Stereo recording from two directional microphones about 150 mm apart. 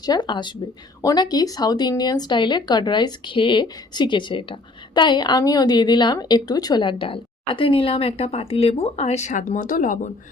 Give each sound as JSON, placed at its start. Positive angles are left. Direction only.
{"t": 0.0, "sound": "a woman's voice", "side_deg": 30}